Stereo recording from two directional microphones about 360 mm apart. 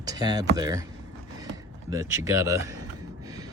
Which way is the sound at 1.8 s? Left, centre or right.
Centre.